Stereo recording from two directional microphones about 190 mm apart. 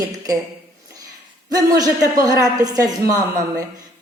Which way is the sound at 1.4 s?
20° right (ahead or behind).